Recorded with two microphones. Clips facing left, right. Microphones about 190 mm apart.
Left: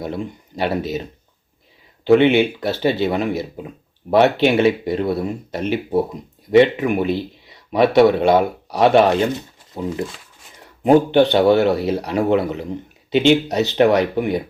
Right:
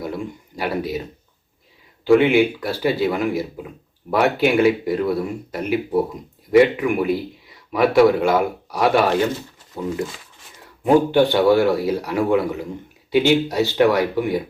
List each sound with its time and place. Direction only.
0.0 s speech: 25° left (ahead or behind)
2.0 s speech: 25° left (ahead or behind)